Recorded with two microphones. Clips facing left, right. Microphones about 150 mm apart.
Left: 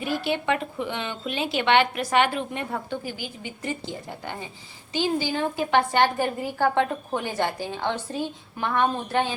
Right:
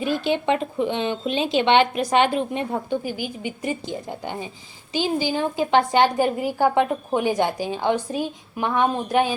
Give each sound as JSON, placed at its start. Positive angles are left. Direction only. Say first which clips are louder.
{"t": 0.0, "sound": "a woman's voice", "louder": "right 4 dB", "side_deg": -20}